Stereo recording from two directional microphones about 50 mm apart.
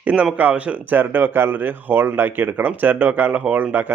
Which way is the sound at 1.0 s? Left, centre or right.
Right.